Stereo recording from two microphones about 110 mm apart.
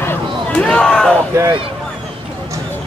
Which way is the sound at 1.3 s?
25° right (ahead or behind).